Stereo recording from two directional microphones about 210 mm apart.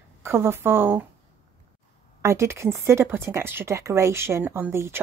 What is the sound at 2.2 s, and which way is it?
Speech, 15° right (ahead or behind).